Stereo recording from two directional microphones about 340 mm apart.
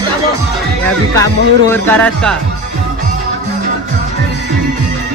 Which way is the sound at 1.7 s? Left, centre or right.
Centre.